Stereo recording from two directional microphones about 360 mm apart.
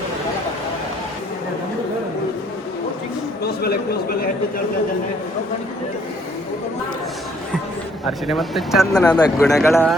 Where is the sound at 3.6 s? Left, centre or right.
Left.